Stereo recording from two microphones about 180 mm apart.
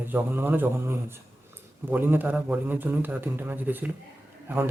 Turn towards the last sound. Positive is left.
turn(degrees=-10)  # may be behind; listen again after turning